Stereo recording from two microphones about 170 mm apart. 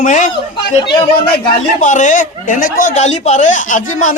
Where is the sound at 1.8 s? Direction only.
45° left (ahead or behind).